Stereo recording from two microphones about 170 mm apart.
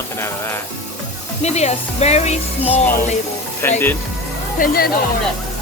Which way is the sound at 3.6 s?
15° left (ahead or behind).